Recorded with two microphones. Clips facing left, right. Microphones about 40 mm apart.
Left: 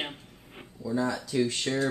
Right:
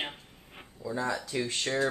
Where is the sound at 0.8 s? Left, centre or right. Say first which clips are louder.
Left 3 dB; centre.